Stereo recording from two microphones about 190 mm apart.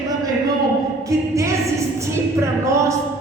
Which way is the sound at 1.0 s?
15° right (ahead or behind).